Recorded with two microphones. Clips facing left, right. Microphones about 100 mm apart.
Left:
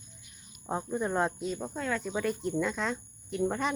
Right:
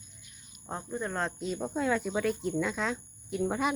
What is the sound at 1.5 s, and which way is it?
Speech, 10° right (ahead or behind).